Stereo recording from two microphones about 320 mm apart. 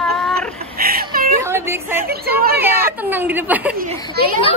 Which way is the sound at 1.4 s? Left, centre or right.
Centre.